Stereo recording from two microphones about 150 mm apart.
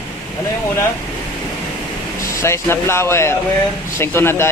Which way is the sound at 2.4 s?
15° left (ahead or behind).